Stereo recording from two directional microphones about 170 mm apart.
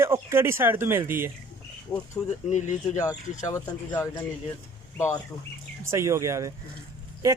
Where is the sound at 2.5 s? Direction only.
45° left (ahead or behind).